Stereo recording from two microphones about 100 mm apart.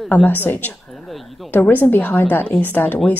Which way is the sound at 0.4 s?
20° left (ahead or behind).